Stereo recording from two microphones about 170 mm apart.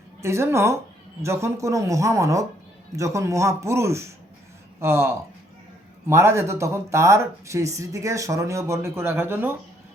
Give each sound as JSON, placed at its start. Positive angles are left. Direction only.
{"t": 0.2, "sound": "speech", "side_deg": -15}